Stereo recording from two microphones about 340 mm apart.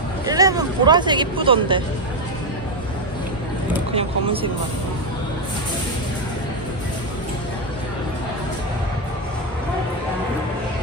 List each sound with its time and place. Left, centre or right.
0.3 s speech: centre
3.9 s speech: centre